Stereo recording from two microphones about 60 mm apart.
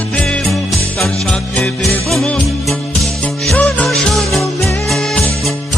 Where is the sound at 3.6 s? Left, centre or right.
Left.